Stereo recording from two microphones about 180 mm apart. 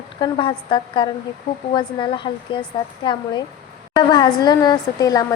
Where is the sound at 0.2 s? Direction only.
30° left (ahead or behind).